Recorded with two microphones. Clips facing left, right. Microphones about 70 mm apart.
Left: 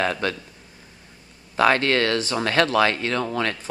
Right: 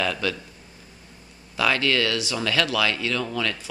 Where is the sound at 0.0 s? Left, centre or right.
Left.